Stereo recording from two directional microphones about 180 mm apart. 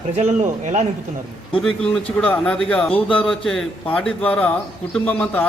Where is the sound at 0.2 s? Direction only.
40° right (ahead or behind).